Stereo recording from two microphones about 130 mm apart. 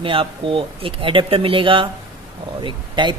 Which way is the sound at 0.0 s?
45° right (ahead or behind).